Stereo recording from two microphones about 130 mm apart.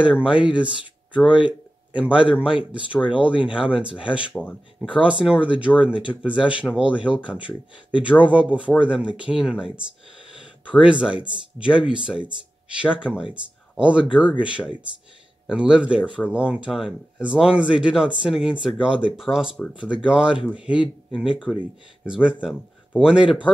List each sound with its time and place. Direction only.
0.0 s a man's voice: 10° right (ahead or behind)
4.4 s speech: 5° left (ahead or behind)
4.8 s speech: 10° right (ahead or behind)
15.4 s speech: 10° right (ahead or behind)